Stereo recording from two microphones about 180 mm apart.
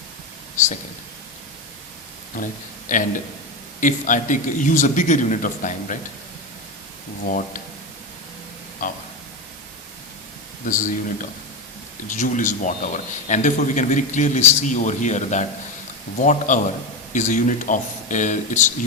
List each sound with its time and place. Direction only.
2.3 s a man's voice: 50° left (ahead or behind)
7.3 s a man's voice: 50° left (ahead or behind)
8.8 s a man's voice: 45° left (ahead or behind)
10.7 s a man's voice: 45° left (ahead or behind)